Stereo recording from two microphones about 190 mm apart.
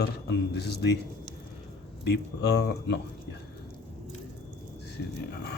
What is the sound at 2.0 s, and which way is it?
Speech, 60° left (ahead or behind).